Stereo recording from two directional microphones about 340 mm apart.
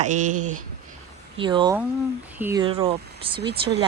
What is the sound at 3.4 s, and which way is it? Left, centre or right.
Speech, right.